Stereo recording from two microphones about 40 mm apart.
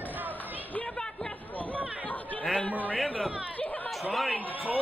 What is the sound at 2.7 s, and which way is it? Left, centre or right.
Speech, right.